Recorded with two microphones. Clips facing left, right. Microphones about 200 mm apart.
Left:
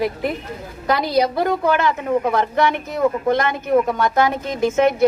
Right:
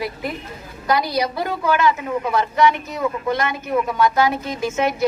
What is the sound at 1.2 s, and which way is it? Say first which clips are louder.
A woman's voice: left 5 dB; 55° left (ahead or behind).